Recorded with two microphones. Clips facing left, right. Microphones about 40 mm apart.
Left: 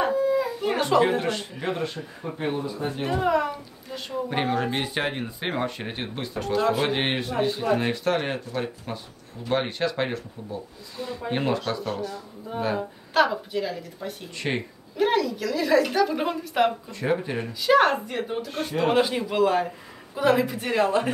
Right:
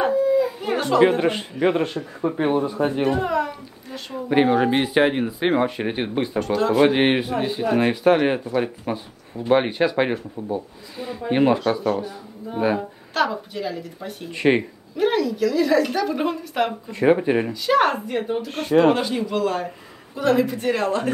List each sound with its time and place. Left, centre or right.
0.0 s howl: centre
1.0 s speech: centre
1.3 s speech: right
3.0 s speech: centre
3.3 s a sound: centre
4.1 s speech: centre
6.4 s speech: centre
13.1 s a woman's voice: centre
14.3 s speech: right
15.0 s a woman's voice: centre
16.9 s speech: right
17.5 s a woman's voice: centre
18.9 s a woman's voice: centre